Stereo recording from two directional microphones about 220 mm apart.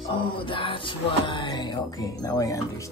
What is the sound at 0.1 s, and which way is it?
Speech, 25° left (ahead or behind).